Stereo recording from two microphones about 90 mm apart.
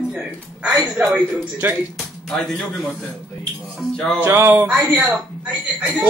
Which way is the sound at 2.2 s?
5° left (ahead or behind).